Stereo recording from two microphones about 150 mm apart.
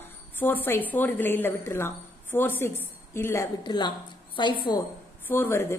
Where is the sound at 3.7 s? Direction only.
30° left (ahead or behind).